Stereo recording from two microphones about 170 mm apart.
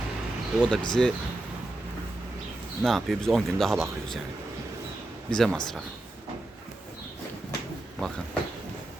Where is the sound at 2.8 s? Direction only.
Centre (ahead or behind).